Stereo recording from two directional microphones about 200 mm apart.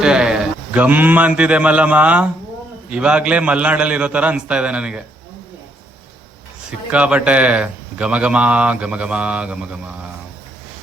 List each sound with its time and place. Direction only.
0.0 s a man's voice: 5° right (ahead or behind)
6.7 s a man's voice: 5° right (ahead or behind)